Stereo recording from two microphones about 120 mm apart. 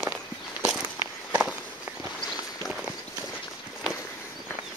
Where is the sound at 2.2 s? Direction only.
Centre (ahead or behind).